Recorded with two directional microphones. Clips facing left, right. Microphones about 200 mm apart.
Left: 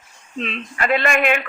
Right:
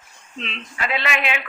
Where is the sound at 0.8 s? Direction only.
50° left (ahead or behind).